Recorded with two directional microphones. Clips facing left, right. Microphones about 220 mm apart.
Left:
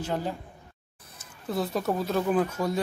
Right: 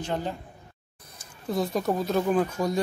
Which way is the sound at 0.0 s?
5° left (ahead or behind).